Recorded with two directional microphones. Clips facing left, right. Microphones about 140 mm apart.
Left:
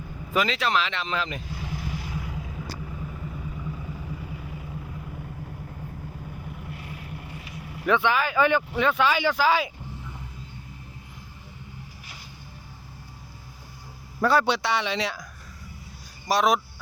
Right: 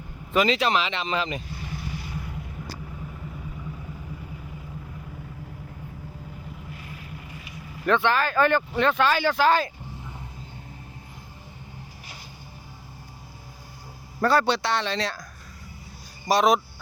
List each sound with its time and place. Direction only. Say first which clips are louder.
0.3 s speech: right 3 dB; centre (ahead or behind)
1.5 s vehicle: left 1 dB; 90° left
7.9 s speech: right 1 dB; 10° left (ahead or behind)
14.3 s speech: even; 15° left (ahead or behind)
16.3 s speech: right 2 dB; 5° left (ahead or behind)